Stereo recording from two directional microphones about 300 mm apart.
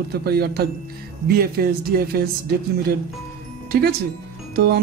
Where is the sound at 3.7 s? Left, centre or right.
Right.